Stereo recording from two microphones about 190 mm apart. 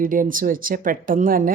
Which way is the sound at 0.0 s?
45° right (ahead or behind).